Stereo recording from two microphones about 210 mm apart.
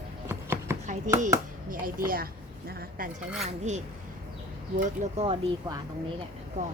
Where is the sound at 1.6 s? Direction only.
45° right (ahead or behind).